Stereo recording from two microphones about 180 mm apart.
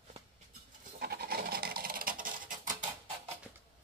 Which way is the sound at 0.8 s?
60° right (ahead or behind).